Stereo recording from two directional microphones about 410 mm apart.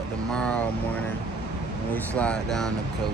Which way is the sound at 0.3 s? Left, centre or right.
Centre.